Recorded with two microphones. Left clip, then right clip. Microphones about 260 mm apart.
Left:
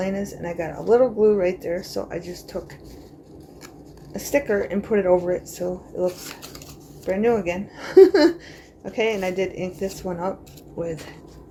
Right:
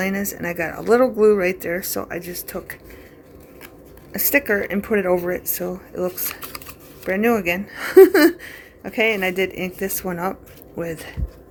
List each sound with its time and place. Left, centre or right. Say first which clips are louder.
0.0 s speech: right 3 dB; right
4.1 s speech: right 3 dB; right
7.0 s speech: right 1 dB; right